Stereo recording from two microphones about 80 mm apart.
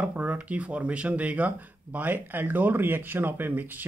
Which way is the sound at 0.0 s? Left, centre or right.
Right.